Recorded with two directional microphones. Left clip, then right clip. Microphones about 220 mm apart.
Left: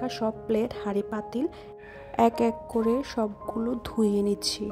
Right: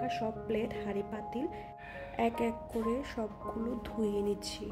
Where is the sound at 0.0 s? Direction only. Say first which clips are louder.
Left 5 dB; 30° left (ahead or behind).